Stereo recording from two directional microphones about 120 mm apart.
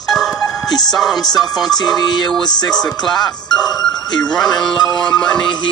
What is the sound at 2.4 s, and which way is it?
Music, 35° left (ahead or behind).